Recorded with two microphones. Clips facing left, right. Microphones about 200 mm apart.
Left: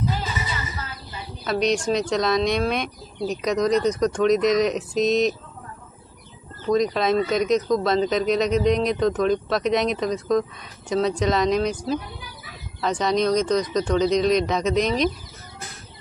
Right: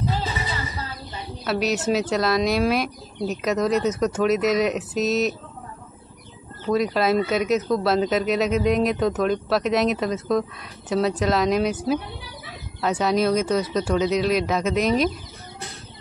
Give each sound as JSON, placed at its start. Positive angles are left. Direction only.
{"t": 0.0, "sound": "music", "side_deg": -30}
{"t": 1.4, "sound": "speech", "side_deg": -5}
{"t": 6.7, "sound": "speech", "side_deg": -5}